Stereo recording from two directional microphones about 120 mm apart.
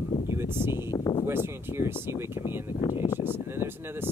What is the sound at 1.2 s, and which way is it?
Speech, 20° right (ahead or behind).